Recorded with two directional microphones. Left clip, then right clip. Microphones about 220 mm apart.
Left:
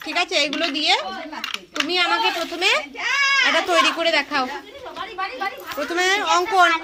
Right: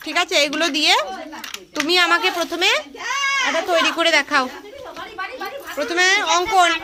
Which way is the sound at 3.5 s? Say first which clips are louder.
Left 1 dB; 5° left (ahead or behind).